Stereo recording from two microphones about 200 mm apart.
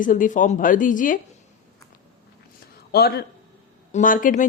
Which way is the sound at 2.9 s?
50° left (ahead or behind).